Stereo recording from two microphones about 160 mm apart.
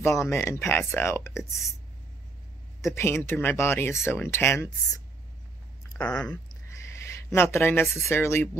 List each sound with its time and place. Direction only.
0.0 s speech: 15° left (ahead or behind)
2.8 s speech: 15° left (ahead or behind)
6.0 s speech: 5° left (ahead or behind)
6.3 s a sound: 20° left (ahead or behind)
8.1 s speech: 15° left (ahead or behind)